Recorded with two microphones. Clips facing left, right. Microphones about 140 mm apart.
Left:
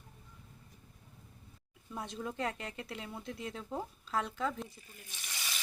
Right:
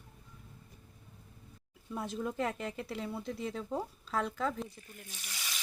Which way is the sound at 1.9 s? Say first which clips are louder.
Right 4 dB; centre (ahead or behind).